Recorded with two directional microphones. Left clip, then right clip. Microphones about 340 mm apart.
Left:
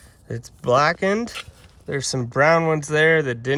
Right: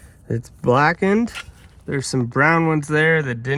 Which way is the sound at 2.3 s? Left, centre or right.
Left.